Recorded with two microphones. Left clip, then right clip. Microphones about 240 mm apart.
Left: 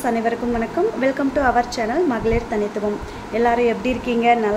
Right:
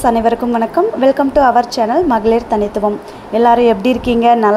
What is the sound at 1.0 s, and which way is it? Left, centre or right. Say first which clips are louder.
Speech: right 10 dB; centre.